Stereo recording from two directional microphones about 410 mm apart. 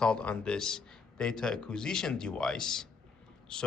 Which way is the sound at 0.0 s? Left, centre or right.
Centre.